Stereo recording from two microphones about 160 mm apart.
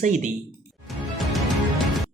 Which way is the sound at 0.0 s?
50° right (ahead or behind).